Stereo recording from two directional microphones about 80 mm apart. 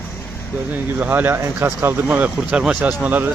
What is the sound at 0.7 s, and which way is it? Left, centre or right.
Speech, right.